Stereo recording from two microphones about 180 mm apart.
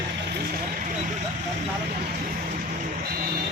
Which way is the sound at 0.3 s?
55° right (ahead or behind).